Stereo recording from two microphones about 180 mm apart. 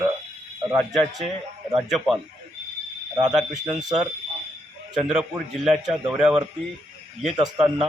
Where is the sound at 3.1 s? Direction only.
20° right (ahead or behind).